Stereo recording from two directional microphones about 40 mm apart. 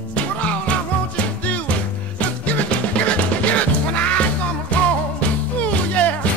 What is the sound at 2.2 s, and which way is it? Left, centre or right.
Music, left.